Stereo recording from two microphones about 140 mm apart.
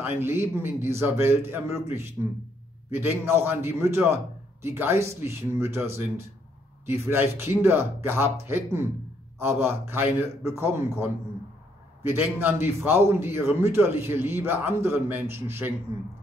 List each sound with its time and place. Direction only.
0.0 s a man's voice: 15° right (ahead or behind)
6.9 s a man's voice: 15° right (ahead or behind)